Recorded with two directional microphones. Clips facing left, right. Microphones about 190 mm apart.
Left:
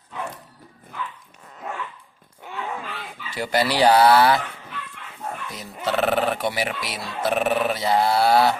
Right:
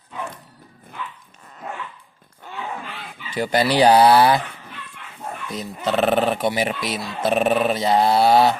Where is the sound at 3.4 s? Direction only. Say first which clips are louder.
Right 3 dB; 20° right (ahead or behind).